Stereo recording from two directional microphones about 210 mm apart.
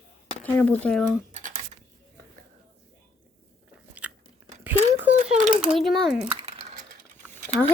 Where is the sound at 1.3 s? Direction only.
40° right (ahead or behind).